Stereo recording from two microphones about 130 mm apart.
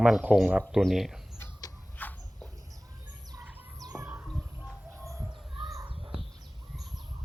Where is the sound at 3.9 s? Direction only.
20° right (ahead or behind).